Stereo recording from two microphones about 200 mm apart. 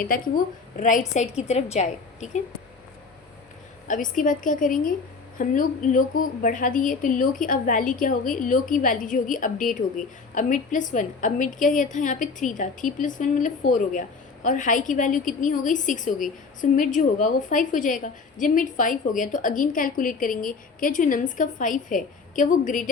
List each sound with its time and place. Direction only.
0.1 s a woman's voice: 45° left (ahead or behind)
3.8 s a woman's voice: 40° left (ahead or behind)